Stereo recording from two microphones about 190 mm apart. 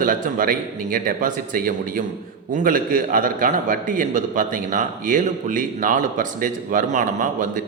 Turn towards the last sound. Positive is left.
turn(degrees=-40)  # may be behind; listen again after turning